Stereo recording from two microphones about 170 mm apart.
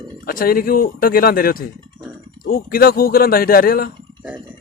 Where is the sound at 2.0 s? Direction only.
55° right (ahead or behind).